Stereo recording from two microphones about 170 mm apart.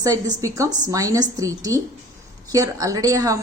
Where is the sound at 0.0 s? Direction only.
20° right (ahead or behind).